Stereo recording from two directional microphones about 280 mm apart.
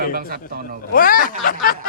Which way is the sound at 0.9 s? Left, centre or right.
Left.